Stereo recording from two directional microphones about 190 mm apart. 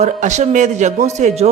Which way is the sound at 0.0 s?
40° right (ahead or behind).